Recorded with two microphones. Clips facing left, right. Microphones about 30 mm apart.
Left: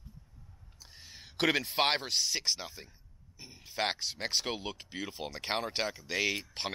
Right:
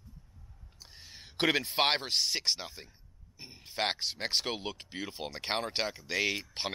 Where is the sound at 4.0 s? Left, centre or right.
Centre.